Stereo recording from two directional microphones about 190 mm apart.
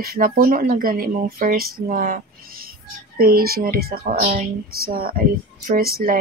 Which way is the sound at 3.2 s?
50° right (ahead or behind).